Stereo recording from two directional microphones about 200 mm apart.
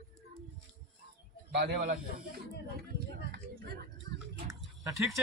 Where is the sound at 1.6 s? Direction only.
50° right (ahead or behind).